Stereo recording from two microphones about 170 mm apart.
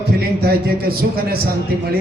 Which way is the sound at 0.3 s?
65° right (ahead or behind).